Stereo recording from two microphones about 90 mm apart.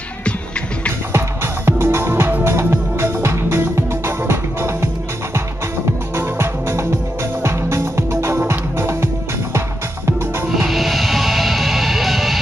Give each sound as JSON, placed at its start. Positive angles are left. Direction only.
{"t": 1.1, "sound": "music", "side_deg": -30}
{"t": 6.1, "sound": "music", "side_deg": -25}
{"t": 10.5, "sound": "music", "side_deg": 0}